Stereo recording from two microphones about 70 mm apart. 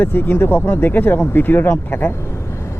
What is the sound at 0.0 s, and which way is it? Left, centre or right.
Speech, left.